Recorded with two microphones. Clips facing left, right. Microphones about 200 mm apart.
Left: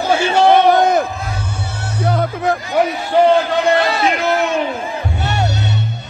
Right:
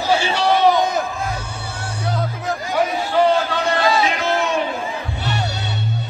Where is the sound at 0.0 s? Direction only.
50° left (ahead or behind).